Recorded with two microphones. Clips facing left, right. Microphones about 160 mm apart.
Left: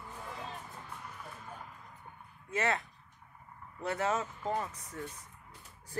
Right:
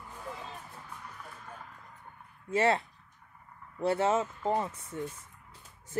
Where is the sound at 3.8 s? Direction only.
30° right (ahead or behind).